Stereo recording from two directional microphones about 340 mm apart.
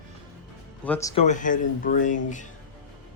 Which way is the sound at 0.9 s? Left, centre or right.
Centre.